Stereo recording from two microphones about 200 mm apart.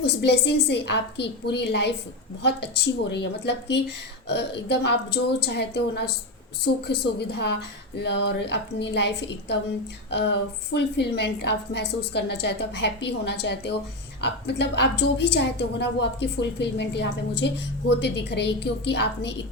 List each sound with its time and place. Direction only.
0.0 s a woman's voice: 55° left (ahead or behind)